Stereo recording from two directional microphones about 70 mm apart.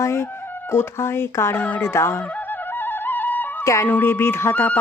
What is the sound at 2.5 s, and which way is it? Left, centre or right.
Music, left.